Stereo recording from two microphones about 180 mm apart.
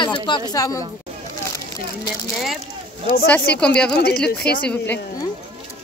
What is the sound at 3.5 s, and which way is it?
Speech, 5° left (ahead or behind).